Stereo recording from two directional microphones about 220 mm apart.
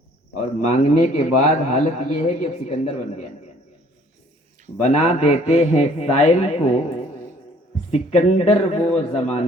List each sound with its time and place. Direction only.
0.7 s a man's voice: 30° left (ahead or behind)
4.8 s a man's voice: 30° left (ahead or behind)